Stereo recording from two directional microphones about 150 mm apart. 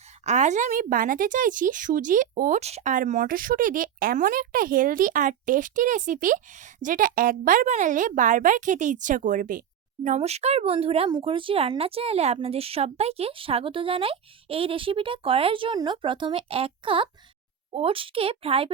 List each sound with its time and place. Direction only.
0.3 s speech: 50° right (ahead or behind)
2.6 s speech: 45° right (ahead or behind); by 10.2 s 60° right (ahead or behind)
10.2 s speech: 45° right (ahead or behind)